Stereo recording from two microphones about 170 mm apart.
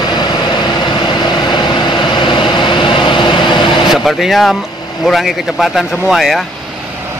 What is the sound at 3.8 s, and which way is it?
Speech, centre (ahead or behind).